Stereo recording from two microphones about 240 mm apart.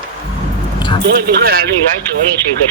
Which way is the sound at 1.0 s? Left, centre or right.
Right.